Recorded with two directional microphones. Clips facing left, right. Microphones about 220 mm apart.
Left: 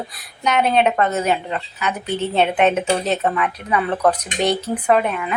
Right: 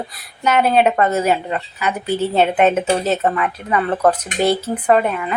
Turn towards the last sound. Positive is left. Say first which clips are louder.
# right 2 dB
turn(degrees=0)  # may be behind; listen again after turning